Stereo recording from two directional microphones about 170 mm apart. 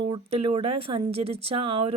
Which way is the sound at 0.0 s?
35° right (ahead or behind).